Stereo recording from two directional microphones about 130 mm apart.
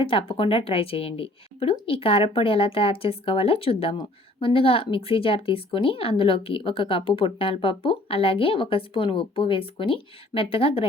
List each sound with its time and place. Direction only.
0.0 s a woman's voice: 40° left (ahead or behind)